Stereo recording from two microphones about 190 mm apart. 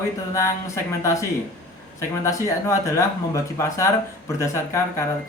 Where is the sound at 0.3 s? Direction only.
15° left (ahead or behind).